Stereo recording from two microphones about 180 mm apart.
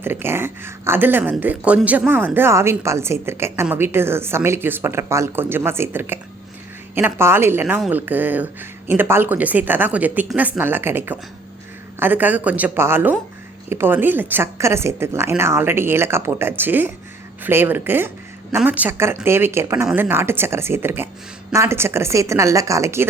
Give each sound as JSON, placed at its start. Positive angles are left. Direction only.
{"t": 0.0, "sound": "speech", "side_deg": -10}